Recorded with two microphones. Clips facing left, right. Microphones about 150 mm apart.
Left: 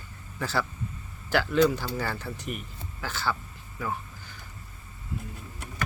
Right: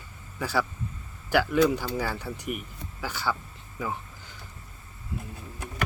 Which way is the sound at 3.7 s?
15° right (ahead or behind).